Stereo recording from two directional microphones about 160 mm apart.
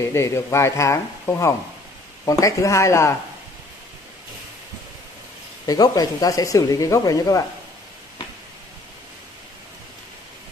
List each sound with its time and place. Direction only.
0.0 s speech: 15° left (ahead or behind)
5.7 s speech: 25° left (ahead or behind)